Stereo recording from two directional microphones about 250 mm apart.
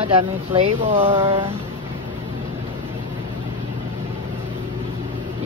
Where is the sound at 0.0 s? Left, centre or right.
Right.